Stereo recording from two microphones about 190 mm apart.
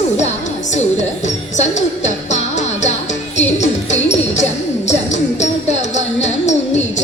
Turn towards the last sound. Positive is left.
turn(degrees=40)  # may be behind; listen again after turning